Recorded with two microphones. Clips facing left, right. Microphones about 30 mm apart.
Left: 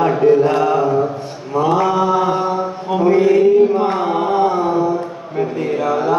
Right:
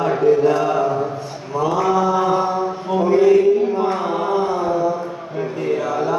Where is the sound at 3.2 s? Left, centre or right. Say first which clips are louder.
Left 2 dB; left.